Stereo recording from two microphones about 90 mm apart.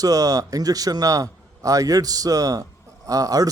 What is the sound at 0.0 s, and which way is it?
A man's voice, 40° right (ahead or behind).